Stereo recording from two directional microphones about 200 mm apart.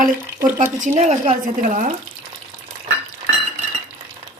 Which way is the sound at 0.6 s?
40° right (ahead or behind).